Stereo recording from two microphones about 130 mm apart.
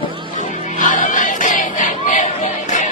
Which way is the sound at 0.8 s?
85° left.